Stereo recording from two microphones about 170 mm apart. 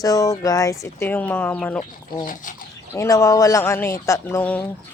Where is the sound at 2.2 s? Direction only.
50° left (ahead or behind).